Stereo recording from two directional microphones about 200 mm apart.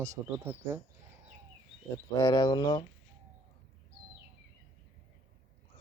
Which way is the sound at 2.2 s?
20° left (ahead or behind).